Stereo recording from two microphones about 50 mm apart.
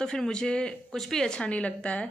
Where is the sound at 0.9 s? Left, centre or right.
Centre; by 2.0 s left.